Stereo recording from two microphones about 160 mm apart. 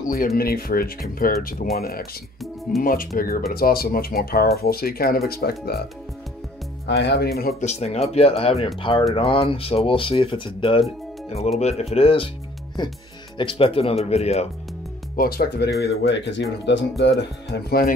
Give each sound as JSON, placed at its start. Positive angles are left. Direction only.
{"t": 0.4, "sound": "speech", "side_deg": 70}
{"t": 6.9, "sound": "speech", "side_deg": 90}
{"t": 7.6, "sound": "speech", "side_deg": 45}
{"t": 13.4, "sound": "speech", "side_deg": 35}
{"t": 15.1, "sound": "speech", "side_deg": 70}
{"t": 15.8, "sound": "speech", "side_deg": 90}